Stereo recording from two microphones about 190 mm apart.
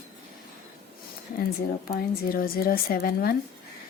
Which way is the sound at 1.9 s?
50° left (ahead or behind).